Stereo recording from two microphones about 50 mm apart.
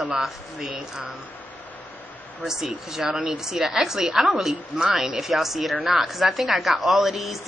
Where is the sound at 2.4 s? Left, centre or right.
Centre.